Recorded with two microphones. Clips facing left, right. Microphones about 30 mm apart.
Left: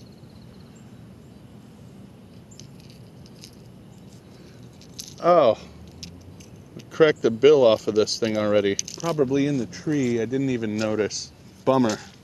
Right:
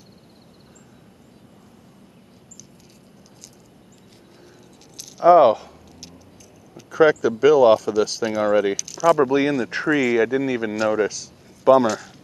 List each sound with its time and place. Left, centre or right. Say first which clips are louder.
5.1 s a sound: right 4 dB; centre
6.9 s speech: right 2 dB; centre
9.2 s speech: right 3 dB; right
9.7 s speech: right 4 dB; right; by 10.8 s centre
10.8 s speech: right 4 dB; centre